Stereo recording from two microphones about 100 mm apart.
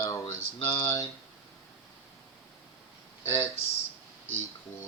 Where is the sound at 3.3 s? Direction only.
30° left (ahead or behind).